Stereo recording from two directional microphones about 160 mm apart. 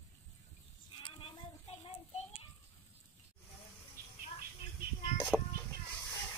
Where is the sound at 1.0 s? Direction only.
35° left (ahead or behind).